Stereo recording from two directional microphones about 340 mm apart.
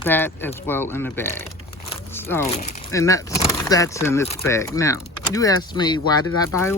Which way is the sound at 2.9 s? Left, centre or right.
Centre.